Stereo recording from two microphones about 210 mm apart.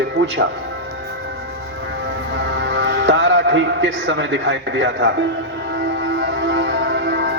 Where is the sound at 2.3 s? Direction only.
55° right (ahead or behind).